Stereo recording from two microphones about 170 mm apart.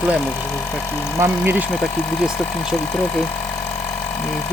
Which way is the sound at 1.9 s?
5° left (ahead or behind).